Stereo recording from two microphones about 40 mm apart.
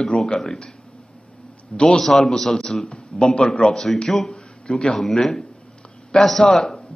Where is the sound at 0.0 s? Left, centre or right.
Centre.